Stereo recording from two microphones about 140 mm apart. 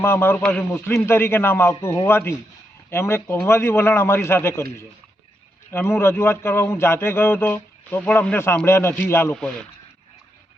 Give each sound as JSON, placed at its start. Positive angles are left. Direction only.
{"t": 0.0, "sound": "a man's voice", "side_deg": 15}